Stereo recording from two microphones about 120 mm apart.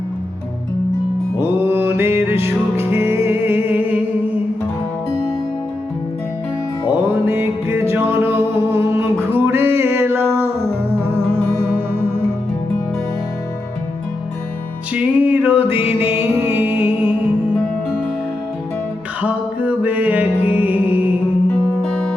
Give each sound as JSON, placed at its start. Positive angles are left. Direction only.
{"t": 1.4, "sound": "music", "side_deg": -20}
{"t": 6.9, "sound": "music", "side_deg": -15}
{"t": 14.9, "sound": "music", "side_deg": -15}
{"t": 19.2, "sound": "music", "side_deg": -10}